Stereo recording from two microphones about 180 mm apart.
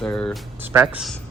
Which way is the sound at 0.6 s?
10° right (ahead or behind).